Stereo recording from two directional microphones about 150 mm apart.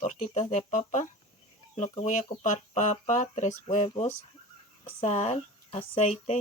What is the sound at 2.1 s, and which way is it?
Speech, 55° left (ahead or behind).